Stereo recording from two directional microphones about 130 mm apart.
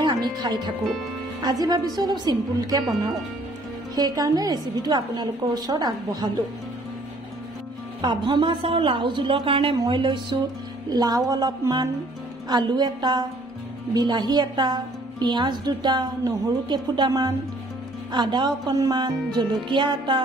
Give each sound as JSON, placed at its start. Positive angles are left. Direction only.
{"t": 0.0, "sound": "a woman's voice", "side_deg": -35}
{"t": 3.9, "sound": "a woman's voice", "side_deg": -30}
{"t": 8.0, "sound": "a woman's voice", "side_deg": -40}